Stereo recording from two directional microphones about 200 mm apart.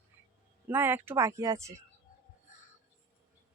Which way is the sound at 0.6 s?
10° right (ahead or behind).